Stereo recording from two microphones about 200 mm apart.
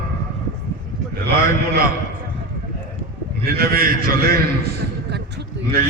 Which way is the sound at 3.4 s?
50° right (ahead or behind).